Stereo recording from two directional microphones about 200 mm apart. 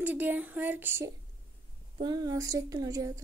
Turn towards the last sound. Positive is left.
turn(degrees=-15)  # may be behind; listen again after turning